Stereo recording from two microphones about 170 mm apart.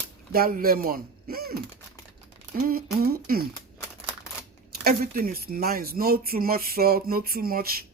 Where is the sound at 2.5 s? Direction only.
60° right (ahead or behind).